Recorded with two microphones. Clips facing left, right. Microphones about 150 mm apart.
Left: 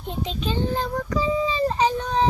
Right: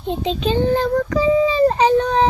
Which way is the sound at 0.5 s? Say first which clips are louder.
Right 9 dB; 75° right (ahead or behind).